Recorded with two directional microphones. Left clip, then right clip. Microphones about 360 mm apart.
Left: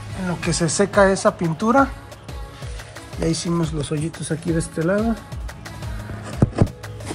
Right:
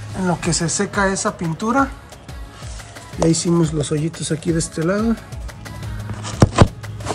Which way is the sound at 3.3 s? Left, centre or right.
Centre.